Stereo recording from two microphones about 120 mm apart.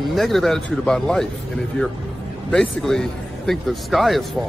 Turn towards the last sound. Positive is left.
turn(degrees=0)  # may be behind; listen again after turning